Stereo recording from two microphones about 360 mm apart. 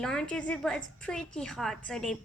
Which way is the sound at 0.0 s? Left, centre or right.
Centre.